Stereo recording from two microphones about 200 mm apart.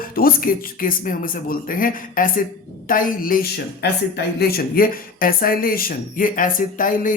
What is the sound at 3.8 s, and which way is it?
Speech, 55° left (ahead or behind).